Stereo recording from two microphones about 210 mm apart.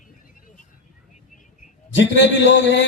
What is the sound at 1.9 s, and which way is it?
Speech, 60° left (ahead or behind).